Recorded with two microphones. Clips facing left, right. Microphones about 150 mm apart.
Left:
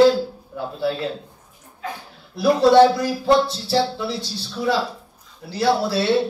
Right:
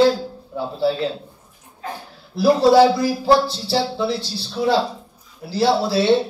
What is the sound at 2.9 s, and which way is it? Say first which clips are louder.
Speech: right 2 dB; 30° right (ahead or behind).